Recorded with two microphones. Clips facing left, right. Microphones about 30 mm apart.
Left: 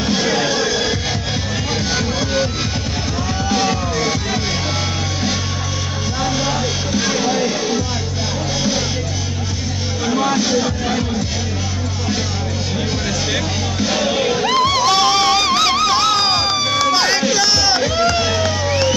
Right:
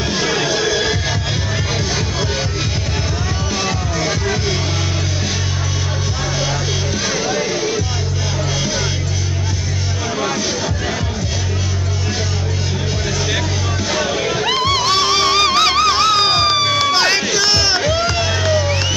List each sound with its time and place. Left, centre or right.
0.6 s music: right
7.0 s music: left
10.0 s music: left
10.4 s music: left
14.3 s music: centre; by 17.3 s right
17.3 s music: right
18.0 s music: centre